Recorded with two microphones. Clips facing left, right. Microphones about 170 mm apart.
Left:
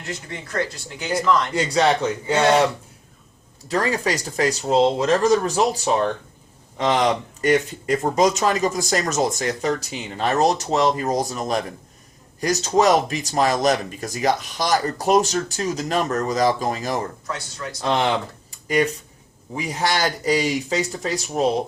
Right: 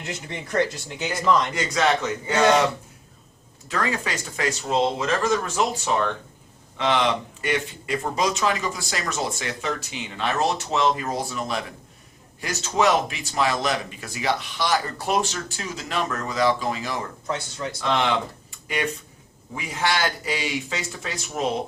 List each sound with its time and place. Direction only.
0.0 s speech: 20° right (ahead or behind)
1.5 s speech: 30° left (ahead or behind)
3.7 s speech: 35° left (ahead or behind)
17.2 s speech: 25° right (ahead or behind)
17.7 s speech: 35° left (ahead or behind)
18.5 s a sound: 40° left (ahead or behind)
19.5 s speech: 40° left (ahead or behind)